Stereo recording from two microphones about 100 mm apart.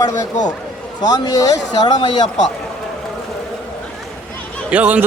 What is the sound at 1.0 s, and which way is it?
Speech, 40° left (ahead or behind).